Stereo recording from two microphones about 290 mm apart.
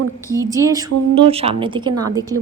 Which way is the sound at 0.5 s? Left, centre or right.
Centre.